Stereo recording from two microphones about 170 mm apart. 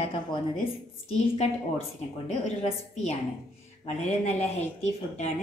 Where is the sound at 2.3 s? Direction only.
40° left (ahead or behind).